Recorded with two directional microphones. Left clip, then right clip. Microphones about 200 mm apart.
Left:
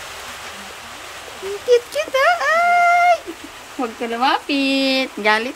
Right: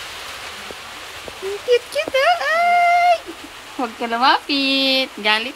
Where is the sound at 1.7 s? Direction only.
10° left (ahead or behind).